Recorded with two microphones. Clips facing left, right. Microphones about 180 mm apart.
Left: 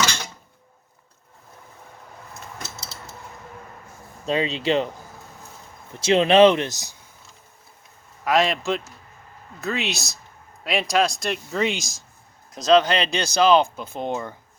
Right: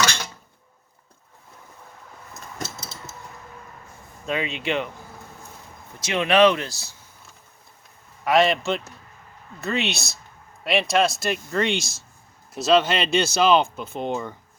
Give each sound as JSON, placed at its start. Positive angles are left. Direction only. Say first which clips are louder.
{"t": 4.3, "sound": "speech", "louder": "left 4 dB", "side_deg": 30}
{"t": 6.0, "sound": "speech", "louder": "left 4 dB", "side_deg": 30}
{"t": 8.2, "sound": "speech", "louder": "right 2 dB", "side_deg": 0}